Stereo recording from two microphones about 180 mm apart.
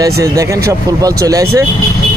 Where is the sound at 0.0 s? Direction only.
15° right (ahead or behind).